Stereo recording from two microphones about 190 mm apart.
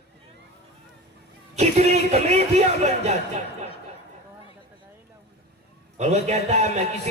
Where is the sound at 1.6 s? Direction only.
35° right (ahead or behind).